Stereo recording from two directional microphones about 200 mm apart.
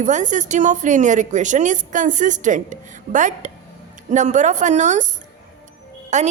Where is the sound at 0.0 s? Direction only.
35° right (ahead or behind).